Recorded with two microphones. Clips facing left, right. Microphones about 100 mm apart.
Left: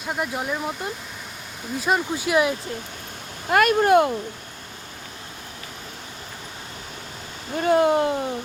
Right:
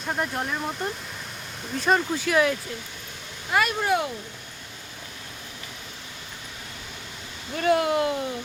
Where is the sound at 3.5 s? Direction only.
55° left (ahead or behind).